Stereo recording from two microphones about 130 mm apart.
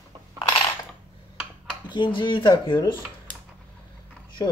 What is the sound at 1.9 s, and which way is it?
Speech, 40° left (ahead or behind).